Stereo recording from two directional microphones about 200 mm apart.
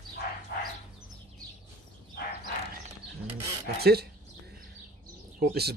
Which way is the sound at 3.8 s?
50° right (ahead or behind).